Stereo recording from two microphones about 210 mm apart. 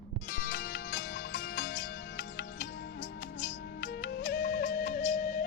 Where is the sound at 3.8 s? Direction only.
55° left (ahead or behind).